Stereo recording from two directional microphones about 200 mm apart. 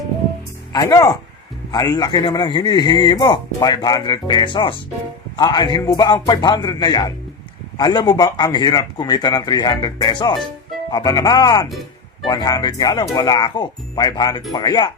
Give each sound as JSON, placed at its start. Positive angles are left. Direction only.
{"t": 0.7, "sound": "speech", "side_deg": 15}